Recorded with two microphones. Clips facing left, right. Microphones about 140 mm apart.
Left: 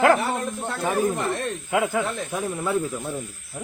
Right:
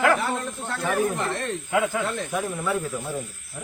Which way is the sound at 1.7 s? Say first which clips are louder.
Left 1 dB; 25° left (ahead or behind).